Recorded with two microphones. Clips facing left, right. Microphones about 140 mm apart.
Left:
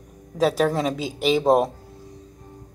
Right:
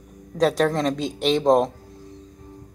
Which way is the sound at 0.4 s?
5° left (ahead or behind).